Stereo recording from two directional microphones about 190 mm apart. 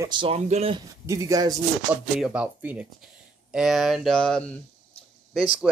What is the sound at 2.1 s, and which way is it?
Speech, 5° right (ahead or behind).